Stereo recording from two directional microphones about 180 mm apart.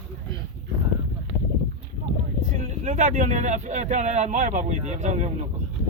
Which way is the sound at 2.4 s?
40° right (ahead or behind).